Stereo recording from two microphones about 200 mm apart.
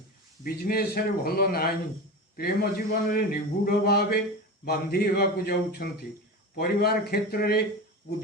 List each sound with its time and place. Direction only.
0.4 s a man's voice: 50° left (ahead or behind)